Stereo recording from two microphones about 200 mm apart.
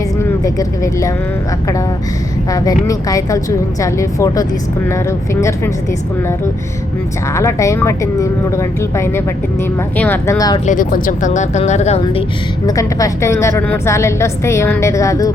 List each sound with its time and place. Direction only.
2.5 s a woman's voice: 15° left (ahead or behind)
7.3 s a woman's voice: 15° left (ahead or behind)
10.7 s speech: 45° left (ahead or behind)
12.6 s a woman's voice: 15° left (ahead or behind)